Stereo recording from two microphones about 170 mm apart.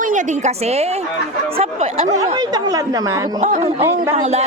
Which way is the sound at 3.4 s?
40° right (ahead or behind).